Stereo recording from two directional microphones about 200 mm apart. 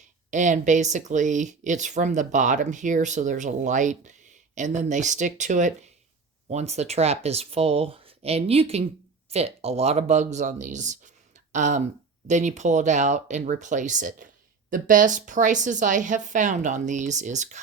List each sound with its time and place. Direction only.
0.3 s speech: 40° right (ahead or behind)